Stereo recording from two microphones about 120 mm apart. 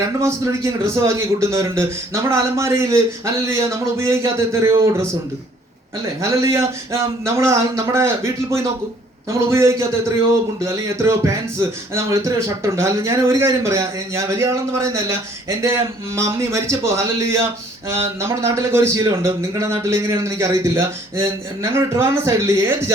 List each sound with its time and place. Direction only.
0.2 s a man's voice: 25° right (ahead or behind)
6.3 s a man's voice: 25° right (ahead or behind)